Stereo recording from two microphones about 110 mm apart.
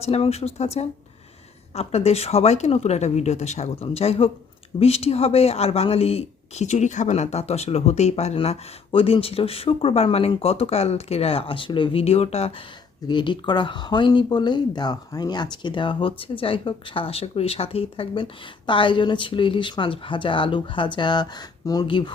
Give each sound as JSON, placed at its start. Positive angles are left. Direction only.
{"t": 0.0, "sound": "speech", "side_deg": 70}
{"t": 3.8, "sound": "speech", "side_deg": 65}
{"t": 12.0, "sound": "speech", "side_deg": 70}
{"t": 13.1, "sound": "speech", "side_deg": 45}
{"t": 21.8, "sound": "speech", "side_deg": 50}